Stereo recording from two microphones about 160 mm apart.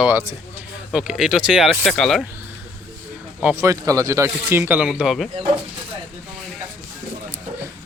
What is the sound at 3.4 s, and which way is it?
Speech, 15° right (ahead or behind).